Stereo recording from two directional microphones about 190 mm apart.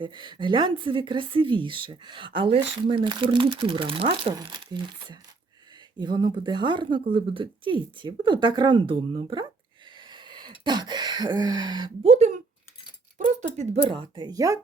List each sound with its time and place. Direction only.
0.0 s a woman's voice: 25° right (ahead or behind)
10.0 s a sound: 25° right (ahead or behind)
12.0 s speech: 35° right (ahead or behind)
13.9 s a woman's voice: 20° right (ahead or behind)